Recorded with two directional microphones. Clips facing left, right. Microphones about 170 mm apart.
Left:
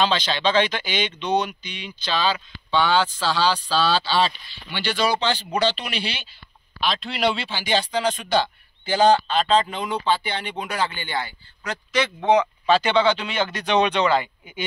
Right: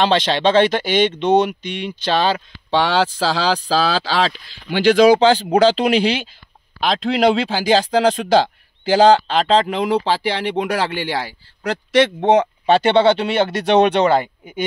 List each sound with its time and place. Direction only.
0.0 s speech: 60° right (ahead or behind); by 11.8 s 75° right (ahead or behind)
12.3 s speech: 55° right (ahead or behind)